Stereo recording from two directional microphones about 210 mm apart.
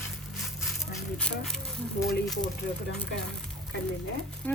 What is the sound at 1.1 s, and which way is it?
Speech, 5° left (ahead or behind).